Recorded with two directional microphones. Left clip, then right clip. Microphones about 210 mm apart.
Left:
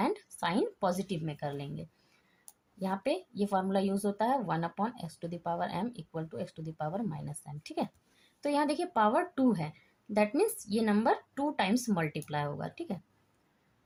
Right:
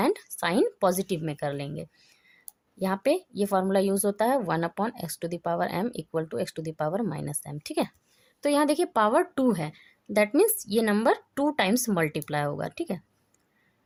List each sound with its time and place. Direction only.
0.0 s a woman's voice: 55° right (ahead or behind)